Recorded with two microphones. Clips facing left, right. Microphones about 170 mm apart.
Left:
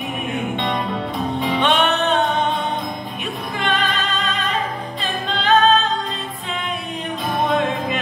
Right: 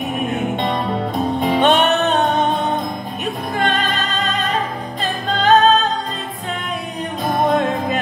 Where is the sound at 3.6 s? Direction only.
40° right (ahead or behind).